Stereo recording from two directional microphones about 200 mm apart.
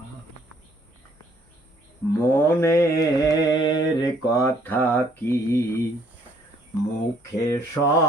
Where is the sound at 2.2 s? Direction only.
10° left (ahead or behind).